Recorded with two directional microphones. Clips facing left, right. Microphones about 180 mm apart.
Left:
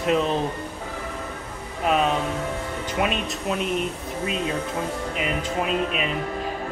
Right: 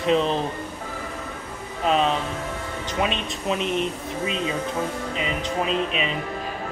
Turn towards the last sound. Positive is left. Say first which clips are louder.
# even
turn(degrees=5)  # may be behind; listen again after turning